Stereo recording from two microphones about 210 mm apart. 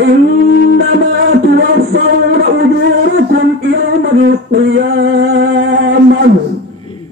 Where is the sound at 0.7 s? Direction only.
50° right (ahead or behind).